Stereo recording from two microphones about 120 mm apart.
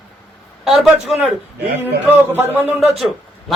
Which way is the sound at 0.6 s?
Centre (ahead or behind).